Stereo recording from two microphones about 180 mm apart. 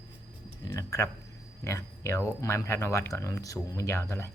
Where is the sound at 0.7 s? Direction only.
15° left (ahead or behind).